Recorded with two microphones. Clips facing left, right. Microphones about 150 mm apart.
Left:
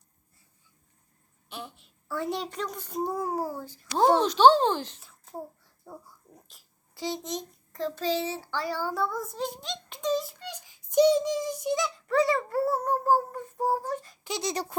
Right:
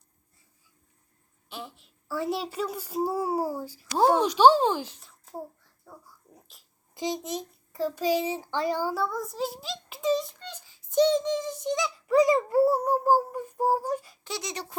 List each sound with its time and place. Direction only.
1.5 s a child's voice: centre (ahead or behind)
4.9 s a sound: centre (ahead or behind)
5.9 s speech: 20° left (ahead or behind)
6.3 s speech: centre (ahead or behind)
6.9 s a child's voice: 15° right (ahead or behind)
8.9 s a child's voice: centre (ahead or behind)
10.4 s speech: 15° left (ahead or behind); by 14.2 s 10° right (ahead or behind)
14.4 s a sound: 40° left (ahead or behind)